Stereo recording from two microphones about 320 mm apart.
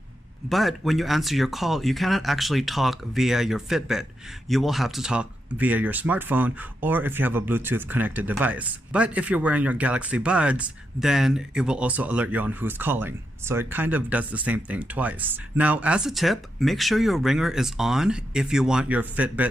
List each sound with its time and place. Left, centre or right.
0.5 s speech: centre